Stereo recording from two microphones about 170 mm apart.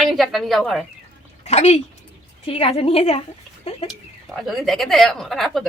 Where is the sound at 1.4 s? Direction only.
40° left (ahead or behind).